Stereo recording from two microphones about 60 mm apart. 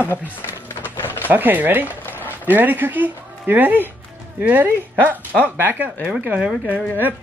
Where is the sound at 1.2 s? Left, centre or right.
Right.